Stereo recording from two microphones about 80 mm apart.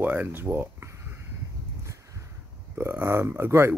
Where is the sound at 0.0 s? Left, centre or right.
Right.